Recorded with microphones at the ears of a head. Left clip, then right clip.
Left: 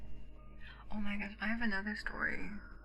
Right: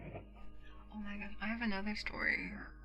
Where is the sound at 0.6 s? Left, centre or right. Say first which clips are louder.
Left 6 dB; left.